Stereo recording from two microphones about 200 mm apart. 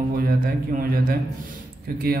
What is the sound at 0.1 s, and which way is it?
A man's voice, 45° right (ahead or behind).